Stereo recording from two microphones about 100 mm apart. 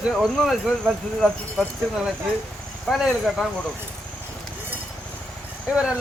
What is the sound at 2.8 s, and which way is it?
Speech, centre (ahead or behind).